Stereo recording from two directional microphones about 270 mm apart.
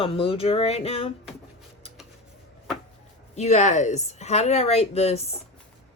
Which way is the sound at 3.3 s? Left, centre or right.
Left.